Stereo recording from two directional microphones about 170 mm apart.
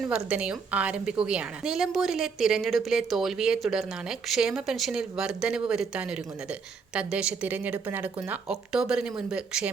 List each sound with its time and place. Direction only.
0.0 s a woman's voice: 5° right (ahead or behind)